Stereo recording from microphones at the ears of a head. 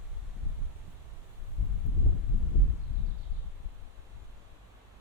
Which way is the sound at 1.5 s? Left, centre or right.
Left.